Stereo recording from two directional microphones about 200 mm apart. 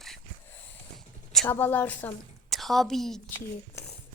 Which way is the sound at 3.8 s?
15° left (ahead or behind).